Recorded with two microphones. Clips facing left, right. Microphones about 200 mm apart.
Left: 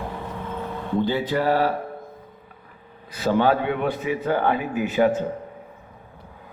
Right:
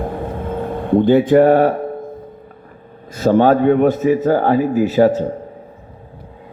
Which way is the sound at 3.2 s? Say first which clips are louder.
Right 8 dB; 45° right (ahead or behind).